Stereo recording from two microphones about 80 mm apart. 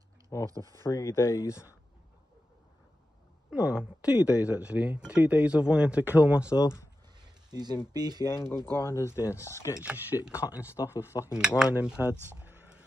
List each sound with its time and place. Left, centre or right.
0.5 s speech: right
0.8 s speech: left
3.4 s speech: centre
7.5 s speech: right
8.3 s speech: left
8.5 s speech: right
8.8 s speech: left
9.8 s speech: centre
10.7 s speech: left
11.2 s speech: centre
12.0 s speech: centre